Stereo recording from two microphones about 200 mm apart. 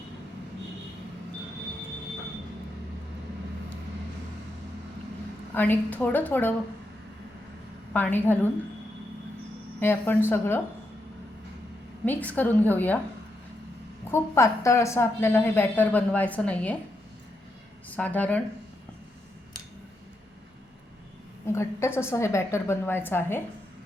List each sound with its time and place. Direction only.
5.5 s a woman's voice: 10° left (ahead or behind)
7.9 s a woman's voice: 10° left (ahead or behind)
9.8 s a woman's voice: 10° left (ahead or behind)
12.0 s a woman's voice: 10° left (ahead or behind)
14.1 s a woman's voice: 15° left (ahead or behind)
17.8 s a woman's voice: 10° left (ahead or behind)
21.4 s a woman's voice: 15° left (ahead or behind)